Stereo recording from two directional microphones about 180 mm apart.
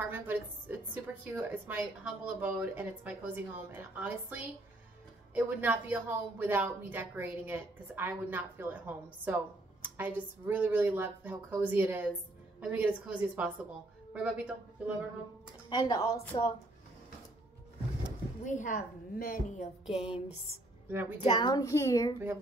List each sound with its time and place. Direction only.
0.0 s a woman's voice: 10° right (ahead or behind)
15.7 s a woman's voice: 25° left (ahead or behind)
18.4 s a woman's voice: 45° left (ahead or behind)
20.9 s speech: 10° right (ahead or behind)
21.2 s a woman's voice: 25° left (ahead or behind)